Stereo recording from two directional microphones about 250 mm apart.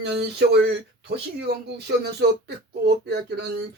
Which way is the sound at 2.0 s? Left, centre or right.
Right.